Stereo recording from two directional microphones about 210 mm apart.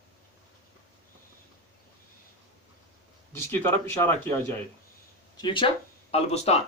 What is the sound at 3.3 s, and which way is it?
Speech, 10° left (ahead or behind).